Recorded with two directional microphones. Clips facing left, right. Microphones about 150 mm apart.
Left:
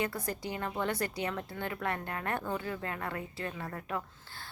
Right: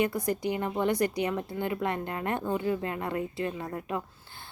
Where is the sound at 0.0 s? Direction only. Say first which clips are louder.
Right 7 dB; 15° right (ahead or behind).